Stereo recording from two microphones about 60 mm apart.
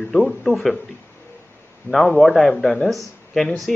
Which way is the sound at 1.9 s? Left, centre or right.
Centre.